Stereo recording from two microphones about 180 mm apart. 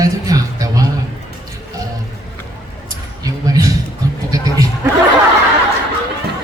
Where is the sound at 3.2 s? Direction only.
20° right (ahead or behind).